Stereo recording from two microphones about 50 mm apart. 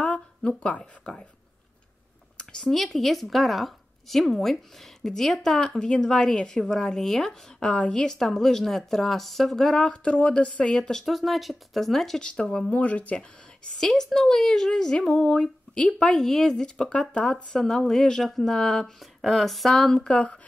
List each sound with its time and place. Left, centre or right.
0.0 s speech: left
2.7 s speech: centre
10.0 s speech: left
10.7 s speech: centre
12.2 s speech: centre
12.6 s speech: left
13.7 s speech: centre
20.1 s speech: left